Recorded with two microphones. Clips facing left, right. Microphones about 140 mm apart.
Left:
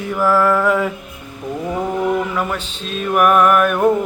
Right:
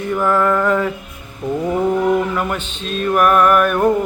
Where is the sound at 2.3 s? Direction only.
Centre (ahead or behind).